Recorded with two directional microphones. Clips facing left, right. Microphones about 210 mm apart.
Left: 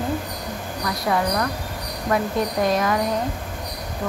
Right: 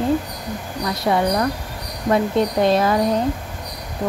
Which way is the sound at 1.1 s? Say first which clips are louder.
Right 4 dB; 25° right (ahead or behind).